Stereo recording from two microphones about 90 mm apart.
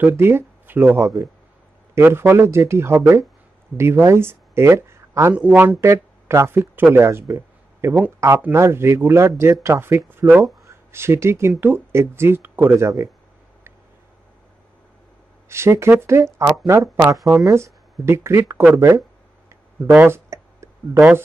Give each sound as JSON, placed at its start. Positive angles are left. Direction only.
{"t": 0.2, "sound": "speech", "side_deg": -25}
{"t": 5.3, "sound": "a man's voice", "side_deg": -15}
{"t": 5.8, "sound": "speech", "side_deg": -30}
{"t": 15.4, "sound": "speech", "side_deg": -30}
{"t": 19.9, "sound": "speech", "side_deg": -20}